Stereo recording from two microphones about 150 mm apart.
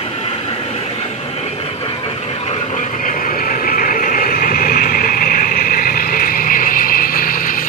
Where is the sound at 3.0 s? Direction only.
60° left (ahead or behind).